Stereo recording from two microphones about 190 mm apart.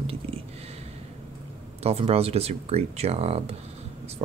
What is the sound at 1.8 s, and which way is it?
Speech, 30° right (ahead or behind).